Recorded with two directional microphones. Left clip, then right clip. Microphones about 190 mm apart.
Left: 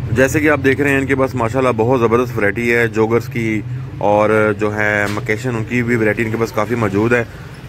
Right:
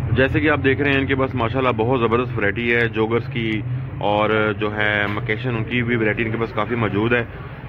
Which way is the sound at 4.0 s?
35° left (ahead or behind).